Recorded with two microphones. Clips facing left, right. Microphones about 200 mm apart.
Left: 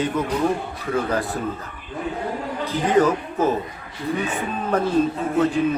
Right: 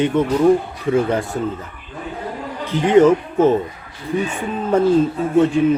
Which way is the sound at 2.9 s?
25° right (ahead or behind).